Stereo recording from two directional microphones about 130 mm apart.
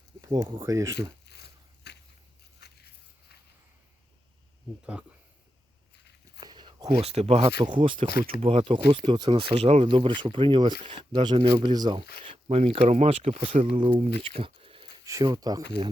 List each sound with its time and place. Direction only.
0.2 s speech: 25° right (ahead or behind)
4.9 s speech: 10° right (ahead or behind)
6.4 s a sound: 35° right (ahead or behind)
7.0 s speech: 55° right (ahead or behind)
15.0 s speech: 25° right (ahead or behind)